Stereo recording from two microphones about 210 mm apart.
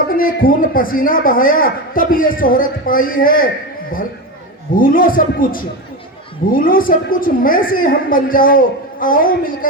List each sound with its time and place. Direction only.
0.2 s a man's voice: 40° left (ahead or behind)
4.8 s a man's voice: 40° left (ahead or behind)